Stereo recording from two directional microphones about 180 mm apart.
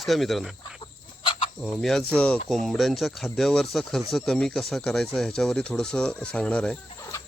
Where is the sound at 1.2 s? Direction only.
30° left (ahead or behind).